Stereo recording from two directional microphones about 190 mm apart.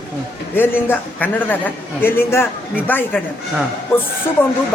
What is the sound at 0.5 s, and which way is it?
A man's voice, 10° left (ahead or behind).